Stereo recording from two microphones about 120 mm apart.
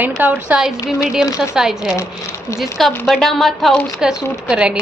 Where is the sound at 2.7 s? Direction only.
Centre (ahead or behind).